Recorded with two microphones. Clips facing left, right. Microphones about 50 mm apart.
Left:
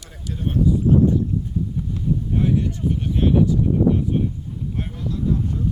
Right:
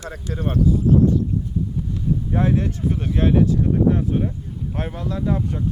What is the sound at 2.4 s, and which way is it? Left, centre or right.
Speech, right.